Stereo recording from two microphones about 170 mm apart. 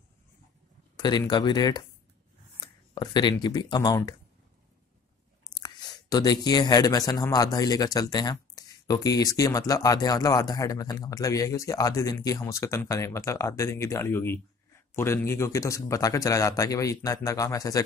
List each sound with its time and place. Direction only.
0.9 s speech: 25° left (ahead or behind)
2.9 s speech: 25° left (ahead or behind)
5.5 s speech: 25° left (ahead or behind)